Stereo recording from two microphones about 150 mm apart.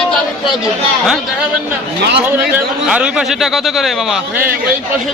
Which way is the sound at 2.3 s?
10° right (ahead or behind).